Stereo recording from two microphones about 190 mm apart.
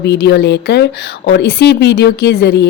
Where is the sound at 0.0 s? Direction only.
60° left (ahead or behind).